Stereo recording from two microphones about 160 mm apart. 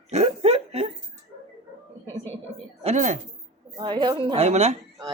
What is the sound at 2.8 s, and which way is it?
Speech, 50° right (ahead or behind).